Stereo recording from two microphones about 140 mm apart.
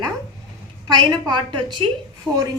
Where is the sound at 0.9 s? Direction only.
30° right (ahead or behind).